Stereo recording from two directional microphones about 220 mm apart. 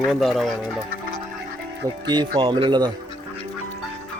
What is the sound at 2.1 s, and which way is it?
Speech, 20° right (ahead or behind).